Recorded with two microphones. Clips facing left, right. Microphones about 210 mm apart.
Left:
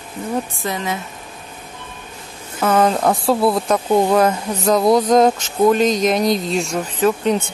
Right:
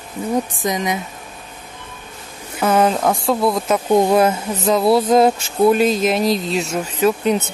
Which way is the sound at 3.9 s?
10° right (ahead or behind).